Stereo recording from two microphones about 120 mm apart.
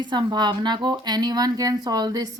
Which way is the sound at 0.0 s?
40° right (ahead or behind).